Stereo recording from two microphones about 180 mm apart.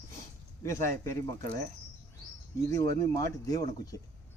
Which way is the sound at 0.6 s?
15° left (ahead or behind).